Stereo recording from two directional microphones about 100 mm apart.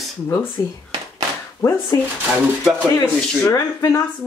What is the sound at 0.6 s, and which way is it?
Speech, 40° left (ahead or behind).